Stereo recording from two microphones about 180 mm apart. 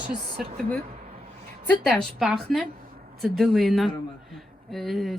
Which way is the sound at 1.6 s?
10° left (ahead or behind).